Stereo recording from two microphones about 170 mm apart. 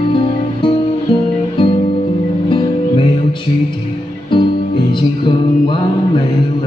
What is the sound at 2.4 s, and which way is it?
Music, 30° left (ahead or behind).